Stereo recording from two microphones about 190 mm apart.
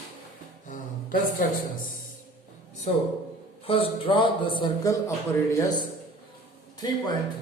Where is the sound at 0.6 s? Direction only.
45° left (ahead or behind).